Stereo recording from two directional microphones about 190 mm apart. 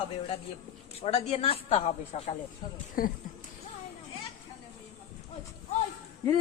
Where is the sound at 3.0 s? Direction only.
50° left (ahead or behind).